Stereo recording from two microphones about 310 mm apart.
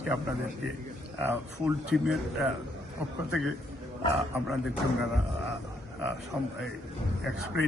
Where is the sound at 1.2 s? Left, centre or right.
Centre.